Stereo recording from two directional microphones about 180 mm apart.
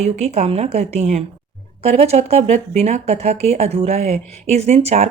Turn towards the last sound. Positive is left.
turn(degrees=-35)  # may be behind; listen again after turning